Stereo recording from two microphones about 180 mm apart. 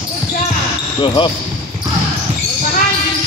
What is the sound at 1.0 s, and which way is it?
Speech, 25° left (ahead or behind).